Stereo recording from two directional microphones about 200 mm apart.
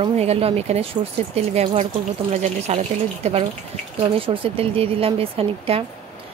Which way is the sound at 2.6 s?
30° right (ahead or behind).